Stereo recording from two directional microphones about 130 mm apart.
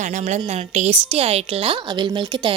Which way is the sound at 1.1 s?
50° right (ahead or behind).